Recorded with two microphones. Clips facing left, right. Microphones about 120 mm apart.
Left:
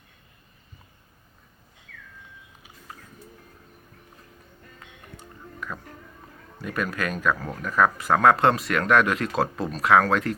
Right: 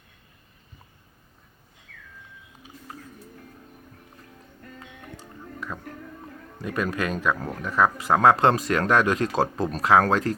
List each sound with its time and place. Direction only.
2.9 s music: 30° right (ahead or behind)
5.5 s music: 20° right (ahead or behind)
6.6 s speech: 25° right (ahead or behind)